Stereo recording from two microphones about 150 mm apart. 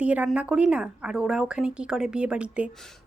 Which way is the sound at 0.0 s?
10° right (ahead or behind).